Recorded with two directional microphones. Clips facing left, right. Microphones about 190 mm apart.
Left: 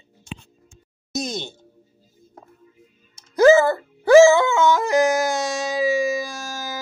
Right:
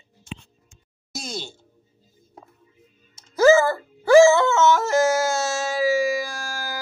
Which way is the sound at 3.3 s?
20° left (ahead or behind).